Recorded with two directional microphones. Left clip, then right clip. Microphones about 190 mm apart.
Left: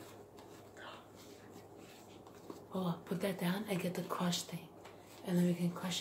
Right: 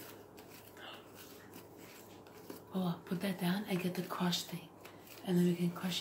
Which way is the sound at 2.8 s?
50° left (ahead or behind).